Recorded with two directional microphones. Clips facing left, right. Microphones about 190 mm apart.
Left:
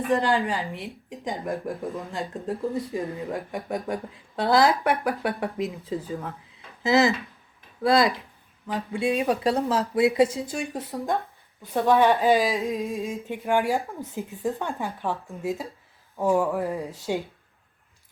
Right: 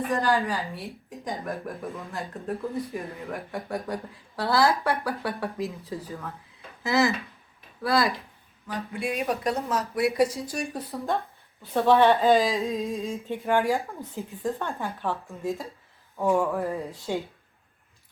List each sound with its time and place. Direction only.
0.1 s a woman's voice: 15° left (ahead or behind)